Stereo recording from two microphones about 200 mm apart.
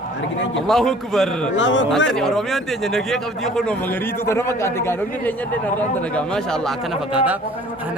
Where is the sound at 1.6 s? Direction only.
65° left (ahead or behind).